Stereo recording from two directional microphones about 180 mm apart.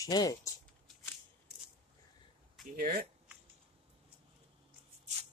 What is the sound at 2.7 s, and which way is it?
Speech, 50° right (ahead or behind).